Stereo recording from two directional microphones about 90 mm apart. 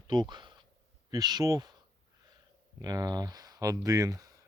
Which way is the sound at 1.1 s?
45° right (ahead or behind).